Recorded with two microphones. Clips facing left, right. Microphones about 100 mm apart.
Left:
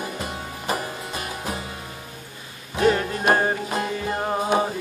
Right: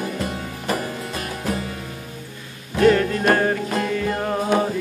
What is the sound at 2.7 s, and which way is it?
Music, 15° left (ahead or behind).